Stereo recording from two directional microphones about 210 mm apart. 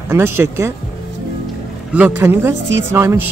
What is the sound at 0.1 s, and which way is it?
Speech, 10° right (ahead or behind).